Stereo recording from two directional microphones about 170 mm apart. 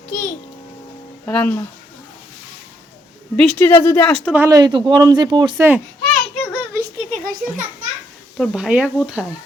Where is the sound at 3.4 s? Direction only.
10° left (ahead or behind).